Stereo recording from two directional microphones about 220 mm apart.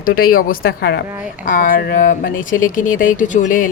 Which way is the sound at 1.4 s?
40° left (ahead or behind).